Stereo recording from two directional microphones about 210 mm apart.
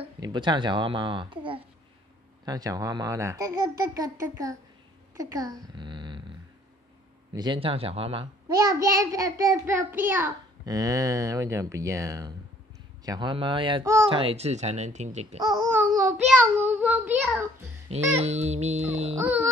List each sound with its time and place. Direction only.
0.0 s a child's voice: 20° right (ahead or behind)
5.1 s a sound: 15° right (ahead or behind)
7.3 s a child's voice: 20° right (ahead or behind)
14.2 s speech: 30° right (ahead or behind)
15.4 s a child's voice: 20° right (ahead or behind); by 17.4 s centre (ahead or behind)
18.2 s speech: 30° right (ahead or behind)
19.1 s a child's voice: 10° right (ahead or behind)